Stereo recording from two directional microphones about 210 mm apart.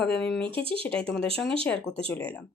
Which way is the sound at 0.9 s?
5° left (ahead or behind).